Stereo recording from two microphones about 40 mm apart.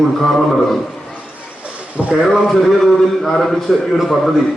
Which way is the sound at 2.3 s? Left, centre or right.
Centre.